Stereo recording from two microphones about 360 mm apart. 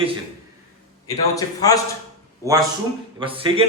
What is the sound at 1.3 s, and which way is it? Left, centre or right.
Speech, centre.